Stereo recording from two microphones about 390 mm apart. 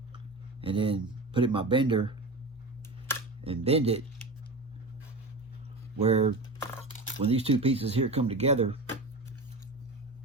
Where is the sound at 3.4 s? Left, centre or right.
Centre.